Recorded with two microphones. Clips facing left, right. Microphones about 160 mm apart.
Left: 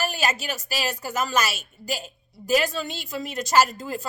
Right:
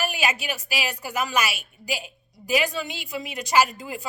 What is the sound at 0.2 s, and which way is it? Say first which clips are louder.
Speech: even; 40° left (ahead or behind).